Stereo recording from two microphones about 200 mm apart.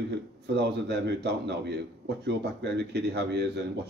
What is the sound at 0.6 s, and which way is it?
A man's voice, 55° right (ahead or behind).